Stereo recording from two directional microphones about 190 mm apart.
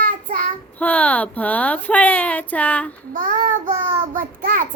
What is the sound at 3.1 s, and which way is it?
Child singing, 45° right (ahead or behind).